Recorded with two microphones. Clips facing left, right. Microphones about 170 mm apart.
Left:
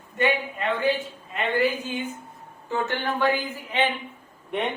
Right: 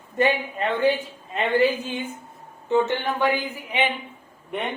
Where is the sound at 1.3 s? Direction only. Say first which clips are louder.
Right 3 dB; 30° right (ahead or behind).